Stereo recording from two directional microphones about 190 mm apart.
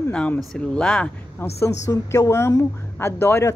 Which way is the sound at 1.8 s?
15° left (ahead or behind).